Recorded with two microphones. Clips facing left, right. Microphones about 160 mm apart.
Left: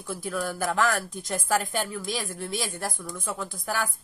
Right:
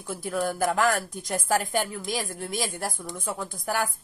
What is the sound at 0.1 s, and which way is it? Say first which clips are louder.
Speech: right 2 dB; 45° right (ahead or behind).